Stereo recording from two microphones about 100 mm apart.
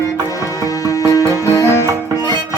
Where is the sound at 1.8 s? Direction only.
35° right (ahead or behind).